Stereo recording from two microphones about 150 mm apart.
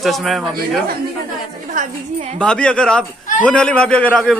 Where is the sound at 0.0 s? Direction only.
Centre (ahead or behind).